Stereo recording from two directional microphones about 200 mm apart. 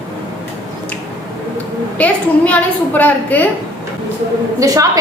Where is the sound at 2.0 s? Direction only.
5° left (ahead or behind).